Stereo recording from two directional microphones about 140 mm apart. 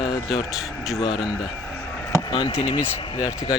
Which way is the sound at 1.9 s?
20° left (ahead or behind).